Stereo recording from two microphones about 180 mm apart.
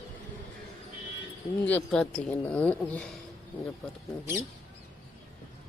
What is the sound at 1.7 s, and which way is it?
Speech, 5° left (ahead or behind).